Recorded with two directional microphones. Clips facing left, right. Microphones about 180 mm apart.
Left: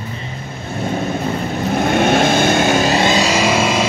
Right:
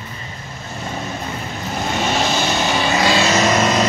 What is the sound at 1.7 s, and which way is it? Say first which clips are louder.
Vehicle: left 7 dB; 55° left (ahead or behind).